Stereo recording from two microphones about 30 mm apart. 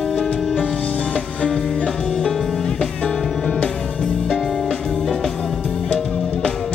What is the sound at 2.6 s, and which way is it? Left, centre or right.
Music, left.